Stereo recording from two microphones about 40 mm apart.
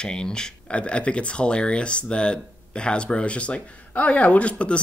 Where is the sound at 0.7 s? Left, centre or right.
Left.